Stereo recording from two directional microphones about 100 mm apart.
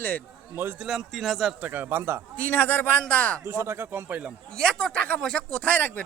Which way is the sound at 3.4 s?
30° right (ahead or behind).